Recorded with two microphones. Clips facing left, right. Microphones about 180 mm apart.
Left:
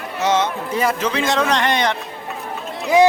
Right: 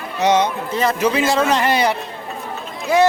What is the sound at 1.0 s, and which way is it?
Speech, 10° right (ahead or behind).